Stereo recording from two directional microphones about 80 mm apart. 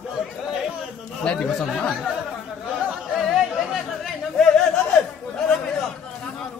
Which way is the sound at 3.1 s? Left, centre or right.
Centre.